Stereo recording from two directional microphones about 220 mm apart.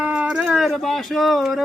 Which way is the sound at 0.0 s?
5° right (ahead or behind).